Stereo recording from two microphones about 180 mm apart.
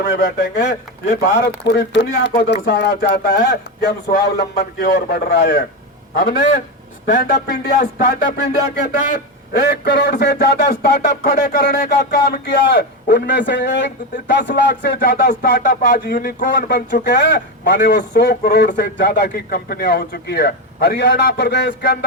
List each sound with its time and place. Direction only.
0.0 s a man's voice: 65° left (ahead or behind); by 16.6 s 50° left (ahead or behind)
17.0 s a man's voice: 70° left (ahead or behind)
19.3 s a man's voice: 55° left (ahead or behind)